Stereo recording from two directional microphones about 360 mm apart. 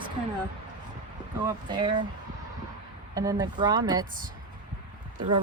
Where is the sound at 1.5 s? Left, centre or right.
Centre.